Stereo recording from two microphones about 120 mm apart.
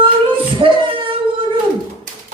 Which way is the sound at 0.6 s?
45° right (ahead or behind).